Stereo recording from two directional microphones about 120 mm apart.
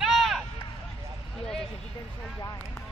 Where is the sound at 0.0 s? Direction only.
Centre (ahead or behind).